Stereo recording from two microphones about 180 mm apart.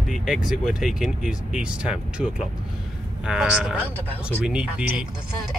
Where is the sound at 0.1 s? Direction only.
Centre (ahead or behind).